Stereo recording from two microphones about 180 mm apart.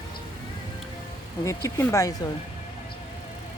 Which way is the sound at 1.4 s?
15° left (ahead or behind).